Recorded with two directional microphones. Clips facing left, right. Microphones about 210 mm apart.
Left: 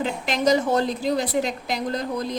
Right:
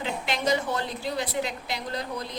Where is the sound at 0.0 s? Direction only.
45° left (ahead or behind).